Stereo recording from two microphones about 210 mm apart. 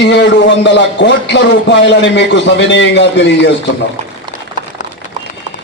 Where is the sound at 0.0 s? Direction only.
60° left (ahead or behind).